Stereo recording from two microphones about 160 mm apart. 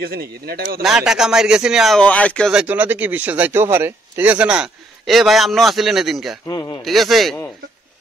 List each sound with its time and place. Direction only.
0.0 s speech: 75° right (ahead or behind)
0.8 s speech: 5° right (ahead or behind)
2.5 s speech: 10° right (ahead or behind)
6.4 s a man's voice: 25° left (ahead or behind)
6.8 s speech: centre (ahead or behind)